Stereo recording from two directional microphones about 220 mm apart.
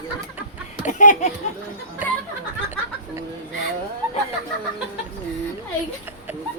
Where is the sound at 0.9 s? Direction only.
35° left (ahead or behind).